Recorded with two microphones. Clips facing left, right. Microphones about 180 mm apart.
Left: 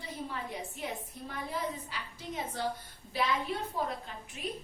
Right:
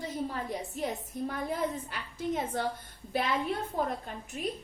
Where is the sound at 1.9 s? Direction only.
50° right (ahead or behind).